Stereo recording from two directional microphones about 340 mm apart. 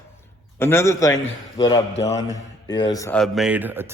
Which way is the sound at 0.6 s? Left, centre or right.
Centre.